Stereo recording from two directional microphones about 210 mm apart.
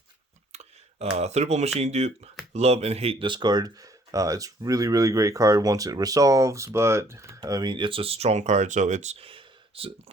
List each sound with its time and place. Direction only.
0.5 s speech: 30° right (ahead or behind)